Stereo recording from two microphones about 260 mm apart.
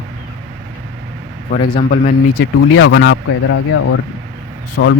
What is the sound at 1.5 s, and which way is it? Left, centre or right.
Speech, left.